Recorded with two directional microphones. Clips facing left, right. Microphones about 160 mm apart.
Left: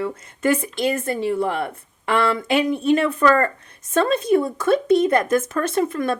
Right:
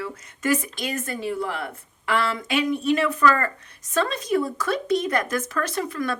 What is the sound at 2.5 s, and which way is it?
A woman's voice, 30° left (ahead or behind).